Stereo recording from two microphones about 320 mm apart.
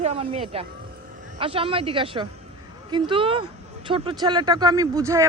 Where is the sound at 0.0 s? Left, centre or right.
Centre.